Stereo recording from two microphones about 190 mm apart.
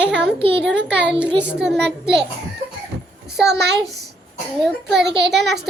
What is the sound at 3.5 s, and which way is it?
Speech, 60° right (ahead or behind).